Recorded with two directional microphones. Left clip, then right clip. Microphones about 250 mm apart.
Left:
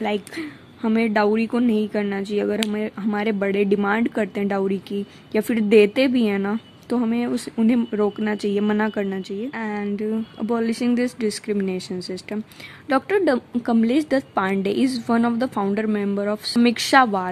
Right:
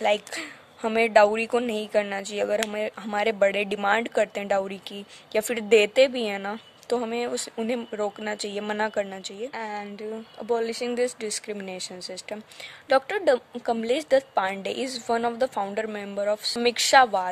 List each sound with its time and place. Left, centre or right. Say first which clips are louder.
0.0 s a woman's voice: right 1 dB; centre